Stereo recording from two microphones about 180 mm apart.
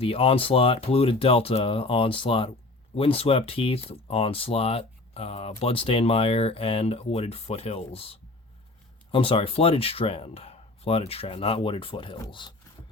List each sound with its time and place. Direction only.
0.0 s speech: 30° left (ahead or behind)